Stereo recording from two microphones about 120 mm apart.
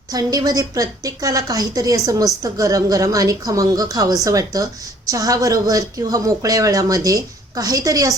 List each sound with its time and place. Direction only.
0.1 s a woman's voice: 30° right (ahead or behind)